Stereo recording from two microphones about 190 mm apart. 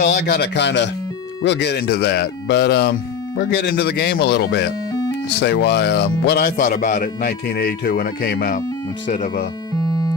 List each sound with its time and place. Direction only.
0.0 s speech: 55° left (ahead or behind)
9.8 s music: 20° left (ahead or behind)